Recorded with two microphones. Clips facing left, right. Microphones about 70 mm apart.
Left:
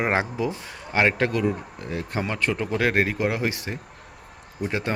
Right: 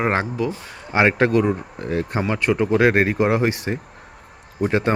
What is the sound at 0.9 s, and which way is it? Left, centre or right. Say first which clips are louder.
Speech: right 5 dB; centre.